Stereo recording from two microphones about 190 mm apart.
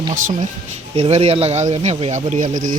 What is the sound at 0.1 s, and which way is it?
Speech, 40° right (ahead or behind).